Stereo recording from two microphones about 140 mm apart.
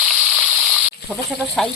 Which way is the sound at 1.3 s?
5° left (ahead or behind).